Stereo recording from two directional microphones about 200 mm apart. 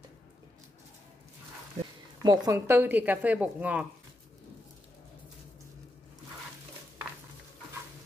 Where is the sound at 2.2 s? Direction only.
15° right (ahead or behind).